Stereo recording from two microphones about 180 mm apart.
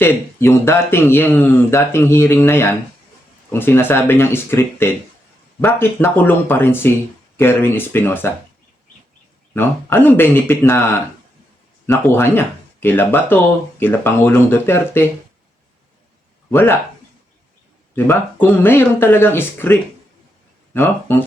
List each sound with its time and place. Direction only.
0.0 s speech: 15° left (ahead or behind)
9.6 s speech: 10° left (ahead or behind)
11.9 s speech: 10° left (ahead or behind)
16.5 s speech: 10° left (ahead or behind)
17.9 s speech: 10° left (ahead or behind)